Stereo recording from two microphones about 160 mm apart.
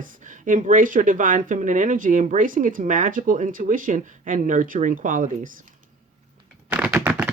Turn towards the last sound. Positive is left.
turn(degrees=-10)  # may be behind; listen again after turning